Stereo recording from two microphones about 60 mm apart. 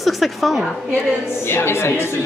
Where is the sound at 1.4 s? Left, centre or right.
Left.